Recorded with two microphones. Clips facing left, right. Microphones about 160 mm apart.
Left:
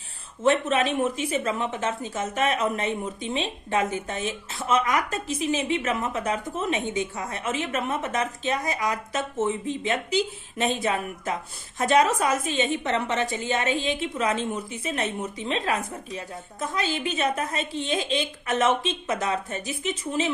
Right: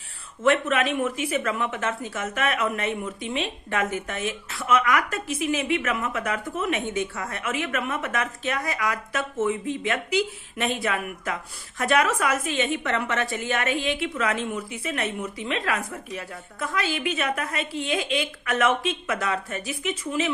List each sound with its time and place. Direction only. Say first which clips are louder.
0.4 s a woman's voice: even; 20° left (ahead or behind)